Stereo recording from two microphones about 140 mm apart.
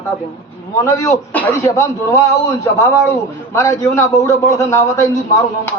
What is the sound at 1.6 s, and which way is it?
A man's voice, 20° left (ahead or behind).